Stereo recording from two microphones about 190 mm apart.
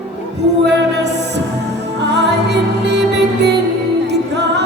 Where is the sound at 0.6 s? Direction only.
65° right (ahead or behind).